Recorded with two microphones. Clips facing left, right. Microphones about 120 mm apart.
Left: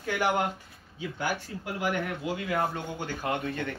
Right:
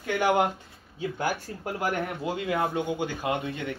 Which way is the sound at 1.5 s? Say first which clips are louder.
Even; 45° right (ahead or behind).